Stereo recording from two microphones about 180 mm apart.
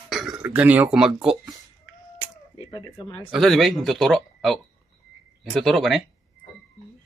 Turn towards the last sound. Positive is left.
turn(degrees=0)  # may be behind; listen again after turning